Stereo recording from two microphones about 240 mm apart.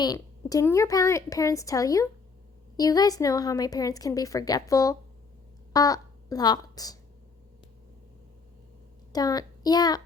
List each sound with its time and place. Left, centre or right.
0.0 s speech: centre
9.1 s a child's voice: centre